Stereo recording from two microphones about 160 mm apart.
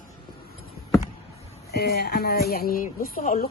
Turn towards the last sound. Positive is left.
turn(degrees=60)  # may be behind; listen again after turning